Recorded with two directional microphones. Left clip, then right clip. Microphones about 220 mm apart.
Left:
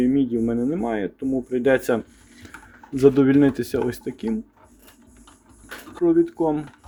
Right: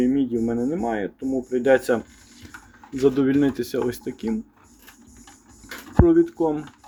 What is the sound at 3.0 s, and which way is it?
Speech, 15° left (ahead or behind).